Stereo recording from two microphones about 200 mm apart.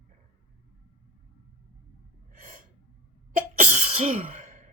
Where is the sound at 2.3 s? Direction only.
40° right (ahead or behind).